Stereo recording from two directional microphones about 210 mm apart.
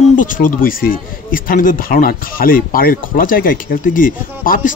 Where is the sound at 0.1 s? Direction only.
40° left (ahead or behind).